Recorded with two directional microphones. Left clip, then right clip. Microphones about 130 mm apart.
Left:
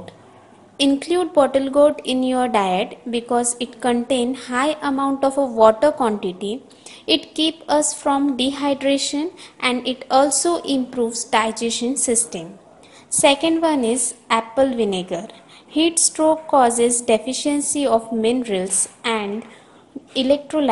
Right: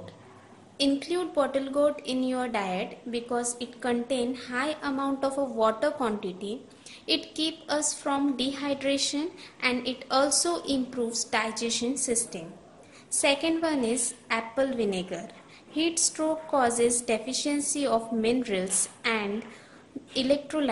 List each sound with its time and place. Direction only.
0.7 s a woman's voice: 35° left (ahead or behind)